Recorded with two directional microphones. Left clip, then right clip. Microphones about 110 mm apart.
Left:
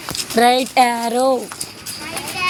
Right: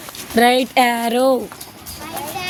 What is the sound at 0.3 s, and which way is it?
A woman's voice, 30° right (ahead or behind).